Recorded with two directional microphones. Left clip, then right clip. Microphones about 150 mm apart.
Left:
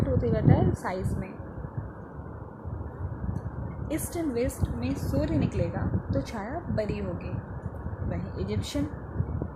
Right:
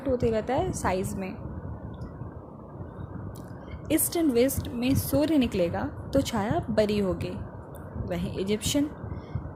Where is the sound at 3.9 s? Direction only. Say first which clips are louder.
Right 6 dB; 30° right (ahead or behind).